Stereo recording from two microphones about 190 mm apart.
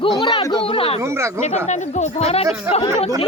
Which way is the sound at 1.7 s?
40° left (ahead or behind).